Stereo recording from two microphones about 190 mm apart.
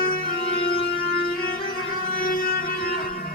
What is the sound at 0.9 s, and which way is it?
Music, 55° left (ahead or behind).